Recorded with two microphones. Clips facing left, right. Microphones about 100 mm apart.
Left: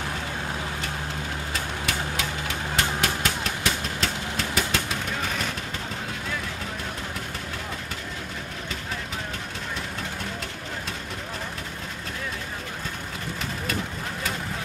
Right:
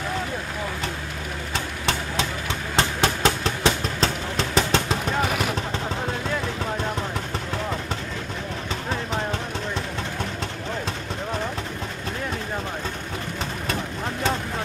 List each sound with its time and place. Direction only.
1.5 s vehicle: 30° right (ahead or behind)